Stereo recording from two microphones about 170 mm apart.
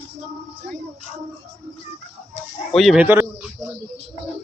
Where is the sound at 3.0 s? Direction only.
10° right (ahead or behind).